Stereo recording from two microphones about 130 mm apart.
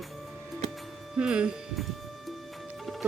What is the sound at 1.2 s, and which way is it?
Speech, 5° right (ahead or behind).